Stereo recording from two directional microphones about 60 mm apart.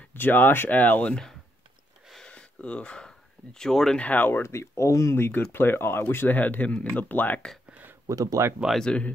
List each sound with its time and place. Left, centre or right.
0.1 s speech: left
2.2 s a sound: left
4.0 s speech: left
4.3 s speech: left
5.1 s speech: left
8.1 s speech: right
8.7 s speech: centre